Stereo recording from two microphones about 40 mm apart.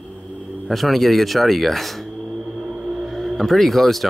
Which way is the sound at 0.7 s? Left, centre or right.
Centre.